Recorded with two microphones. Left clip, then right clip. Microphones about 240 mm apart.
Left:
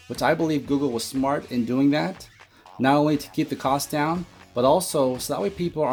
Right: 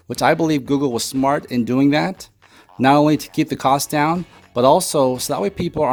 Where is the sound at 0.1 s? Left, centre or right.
Right.